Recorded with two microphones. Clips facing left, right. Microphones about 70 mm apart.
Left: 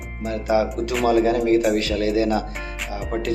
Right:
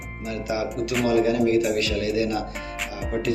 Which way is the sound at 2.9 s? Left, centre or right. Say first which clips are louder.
Left 1 dB; left.